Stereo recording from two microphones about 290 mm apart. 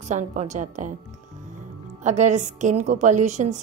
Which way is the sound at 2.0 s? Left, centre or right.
Right.